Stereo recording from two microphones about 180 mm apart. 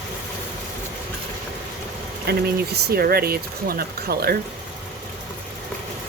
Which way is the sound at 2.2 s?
65° right (ahead or behind).